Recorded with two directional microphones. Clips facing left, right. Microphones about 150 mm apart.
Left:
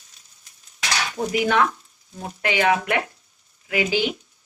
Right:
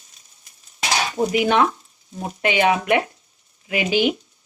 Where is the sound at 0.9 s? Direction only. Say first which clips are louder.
Right 4 dB; 25° right (ahead or behind).